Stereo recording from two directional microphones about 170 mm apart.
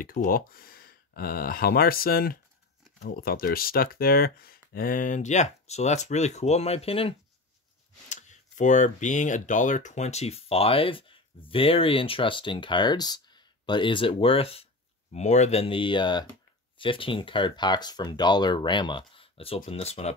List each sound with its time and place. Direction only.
0.0 s speech: 55° left (ahead or behind); by 7.2 s 35° left (ahead or behind)
8.1 s speech: 45° left (ahead or behind)